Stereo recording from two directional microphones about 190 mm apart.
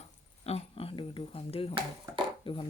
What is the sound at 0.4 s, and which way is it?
Speech, 30° left (ahead or behind).